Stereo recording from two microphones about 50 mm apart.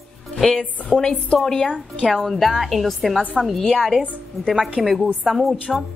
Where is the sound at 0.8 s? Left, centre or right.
Centre.